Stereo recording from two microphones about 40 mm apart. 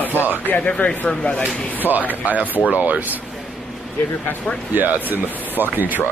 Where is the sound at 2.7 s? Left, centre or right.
Right.